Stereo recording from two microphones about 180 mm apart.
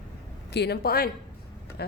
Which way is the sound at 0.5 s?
65° left (ahead or behind).